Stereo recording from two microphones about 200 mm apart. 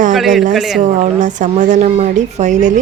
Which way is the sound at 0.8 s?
40° right (ahead or behind).